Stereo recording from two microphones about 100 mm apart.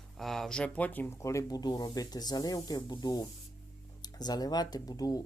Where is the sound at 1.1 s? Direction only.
30° left (ahead or behind).